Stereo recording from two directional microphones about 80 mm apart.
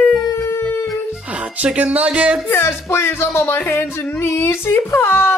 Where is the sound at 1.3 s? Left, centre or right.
Centre.